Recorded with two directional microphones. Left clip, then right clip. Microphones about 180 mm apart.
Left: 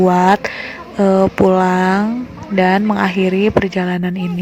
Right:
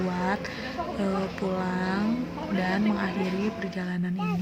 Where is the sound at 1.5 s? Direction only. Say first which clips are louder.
Left 16 dB; 45° left (ahead or behind).